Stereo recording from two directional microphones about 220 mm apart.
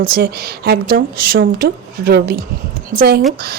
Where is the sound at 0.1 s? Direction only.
45° right (ahead or behind).